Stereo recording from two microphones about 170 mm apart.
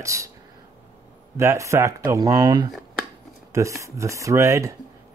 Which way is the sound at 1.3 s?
15° right (ahead or behind).